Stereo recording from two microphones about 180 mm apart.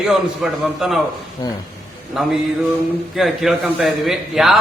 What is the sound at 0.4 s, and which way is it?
Speech, 5° right (ahead or behind).